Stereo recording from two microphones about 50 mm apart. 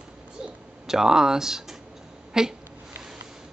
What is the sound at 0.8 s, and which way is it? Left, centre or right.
Speech, centre.